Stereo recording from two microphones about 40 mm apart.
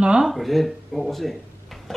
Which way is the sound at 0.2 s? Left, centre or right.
Centre.